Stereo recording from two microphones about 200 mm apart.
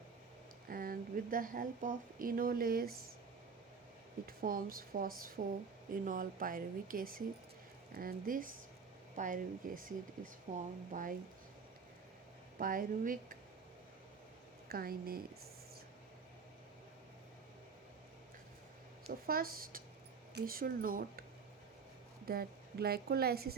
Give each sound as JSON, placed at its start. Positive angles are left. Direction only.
{"t": 0.7, "sound": "speech", "side_deg": -45}
{"t": 4.3, "sound": "a woman's voice", "side_deg": -45}
{"t": 12.5, "sound": "a woman's voice", "side_deg": -45}
{"t": 14.7, "sound": "a woman's voice", "side_deg": -50}
{"t": 19.2, "sound": "a woman's voice", "side_deg": -45}
{"t": 22.3, "sound": "a woman's voice", "side_deg": -50}